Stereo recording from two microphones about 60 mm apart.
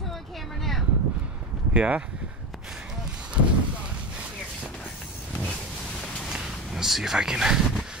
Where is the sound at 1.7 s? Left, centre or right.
Right.